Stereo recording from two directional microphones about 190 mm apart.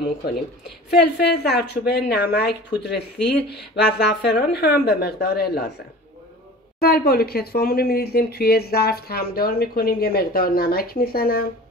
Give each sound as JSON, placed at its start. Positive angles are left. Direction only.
{"t": 0.0, "sound": "a woman's voice", "side_deg": 55}
{"t": 6.8, "sound": "speech", "side_deg": 55}